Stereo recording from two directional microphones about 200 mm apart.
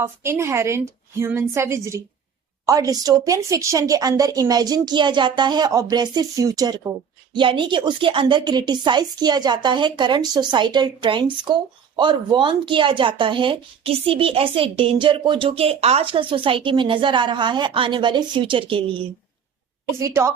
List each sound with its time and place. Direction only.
0.0 s a woman's voice: 10° right (ahead or behind)
20.0 s speech: 15° right (ahead or behind)